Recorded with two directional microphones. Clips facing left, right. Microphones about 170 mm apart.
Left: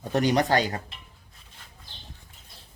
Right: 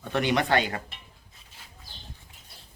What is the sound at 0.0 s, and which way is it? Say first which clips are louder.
Speech: left 3 dB; 40° left (ahead or behind).